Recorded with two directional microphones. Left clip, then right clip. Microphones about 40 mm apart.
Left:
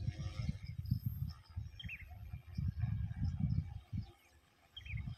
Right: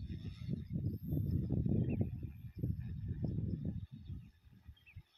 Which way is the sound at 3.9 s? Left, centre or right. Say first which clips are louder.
Left 7 dB; left.